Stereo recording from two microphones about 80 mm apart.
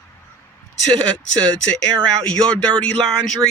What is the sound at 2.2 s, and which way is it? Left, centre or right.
Speech, centre.